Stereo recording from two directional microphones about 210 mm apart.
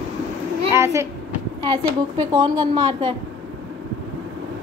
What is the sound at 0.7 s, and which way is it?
A child's voice, 15° right (ahead or behind).